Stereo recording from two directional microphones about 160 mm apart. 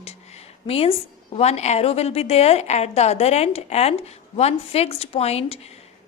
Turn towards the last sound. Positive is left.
turn(degrees=40)  # may be behind; listen again after turning